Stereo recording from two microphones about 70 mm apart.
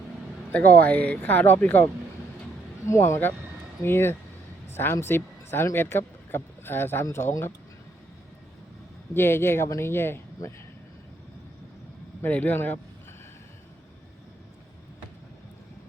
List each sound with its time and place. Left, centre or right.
0.5 s speech: left
2.8 s speech: left
9.1 s speech: left
12.2 s speech: left